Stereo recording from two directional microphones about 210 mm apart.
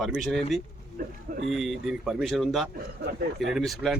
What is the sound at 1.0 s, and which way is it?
Speech, 45° right (ahead or behind).